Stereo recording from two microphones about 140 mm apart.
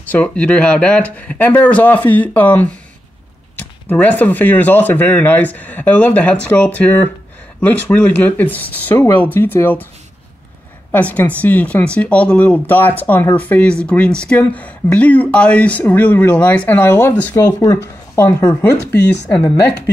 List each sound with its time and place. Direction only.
0.1 s speech: 10° left (ahead or behind)
10.9 s speech: 10° left (ahead or behind)
17.4 s speech: 25° left (ahead or behind)